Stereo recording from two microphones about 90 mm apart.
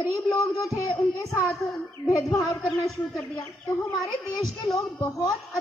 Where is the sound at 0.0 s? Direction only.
40° left (ahead or behind).